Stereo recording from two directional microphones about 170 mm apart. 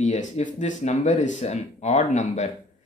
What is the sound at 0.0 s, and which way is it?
Speech, 45° left (ahead or behind).